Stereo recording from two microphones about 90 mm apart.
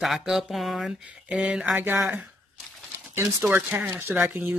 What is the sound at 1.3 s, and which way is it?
Speech, 10° right (ahead or behind).